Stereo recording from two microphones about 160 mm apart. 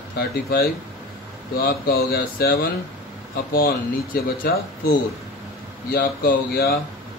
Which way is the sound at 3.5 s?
65° left (ahead or behind).